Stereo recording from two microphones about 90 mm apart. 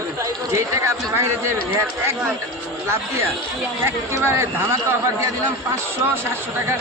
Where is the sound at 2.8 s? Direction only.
30° right (ahead or behind).